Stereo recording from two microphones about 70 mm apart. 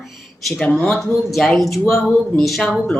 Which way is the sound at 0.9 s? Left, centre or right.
Centre.